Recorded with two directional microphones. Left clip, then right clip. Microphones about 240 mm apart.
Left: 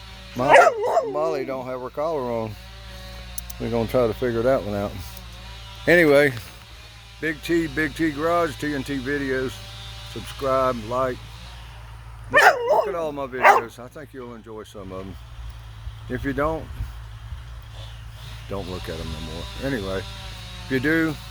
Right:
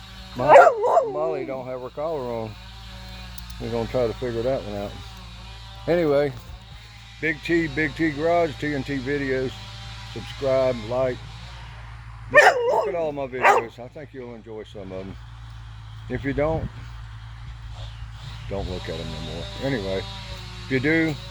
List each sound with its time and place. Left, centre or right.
0.4 s dog: centre
1.1 s speech: left
5.8 s speech: left
7.2 s speech: centre
12.3 s dog: left
12.9 s speech: centre
13.4 s speech: left
13.7 s speech: centre
16.0 s speech: centre
18.9 s speech: centre